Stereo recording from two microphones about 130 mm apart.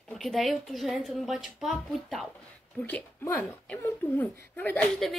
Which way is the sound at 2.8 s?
15° left (ahead or behind).